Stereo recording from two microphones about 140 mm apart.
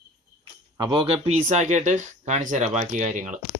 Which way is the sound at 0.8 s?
40° right (ahead or behind).